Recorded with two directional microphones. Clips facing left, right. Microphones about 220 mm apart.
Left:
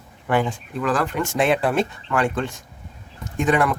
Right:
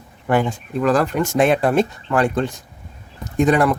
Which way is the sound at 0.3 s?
40° right (ahead or behind).